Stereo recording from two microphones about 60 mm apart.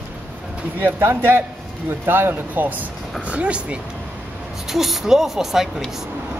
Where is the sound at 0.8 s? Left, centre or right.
Right; by 3.8 s centre.